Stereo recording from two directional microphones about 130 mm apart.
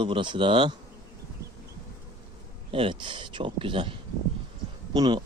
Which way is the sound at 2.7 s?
40° right (ahead or behind).